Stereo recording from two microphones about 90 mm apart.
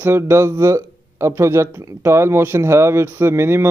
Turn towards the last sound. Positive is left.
turn(degrees=-30)  # may be behind; listen again after turning